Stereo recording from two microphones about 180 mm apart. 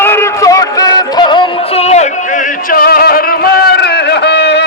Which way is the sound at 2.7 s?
55° left (ahead or behind).